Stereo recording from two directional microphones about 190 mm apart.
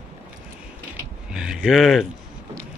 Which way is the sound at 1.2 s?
5° right (ahead or behind).